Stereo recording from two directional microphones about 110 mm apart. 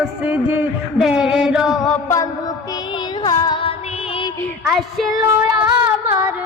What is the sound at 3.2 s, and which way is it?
Child singing, 40° left (ahead or behind).